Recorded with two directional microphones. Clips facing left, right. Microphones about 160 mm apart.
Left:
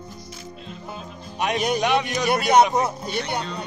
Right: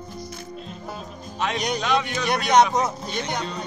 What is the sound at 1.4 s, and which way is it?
A man's voice, 10° left (ahead or behind).